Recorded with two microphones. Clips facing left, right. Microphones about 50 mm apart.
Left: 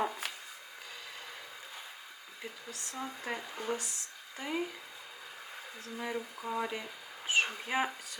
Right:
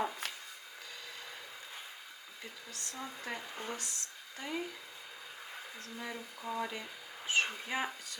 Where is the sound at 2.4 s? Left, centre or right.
Centre.